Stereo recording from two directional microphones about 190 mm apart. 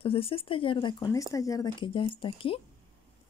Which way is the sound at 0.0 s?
30° left (ahead or behind).